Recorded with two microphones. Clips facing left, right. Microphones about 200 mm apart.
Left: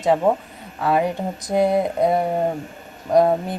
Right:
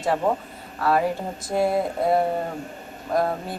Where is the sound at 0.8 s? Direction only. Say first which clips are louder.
Left 2 dB; 15° left (ahead or behind).